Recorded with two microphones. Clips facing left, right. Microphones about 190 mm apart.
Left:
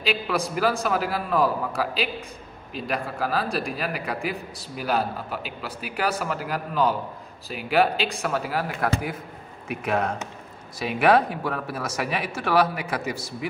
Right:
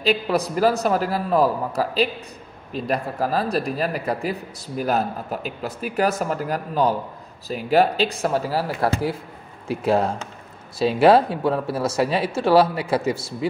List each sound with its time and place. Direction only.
0.0 s speech: 40° right (ahead or behind)